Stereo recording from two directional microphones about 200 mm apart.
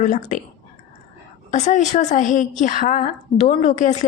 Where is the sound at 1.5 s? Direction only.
35° left (ahead or behind).